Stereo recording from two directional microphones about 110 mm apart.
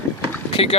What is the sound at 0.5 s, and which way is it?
Speech, 60° left (ahead or behind).